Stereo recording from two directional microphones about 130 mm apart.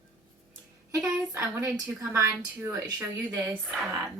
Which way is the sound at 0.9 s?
20° right (ahead or behind).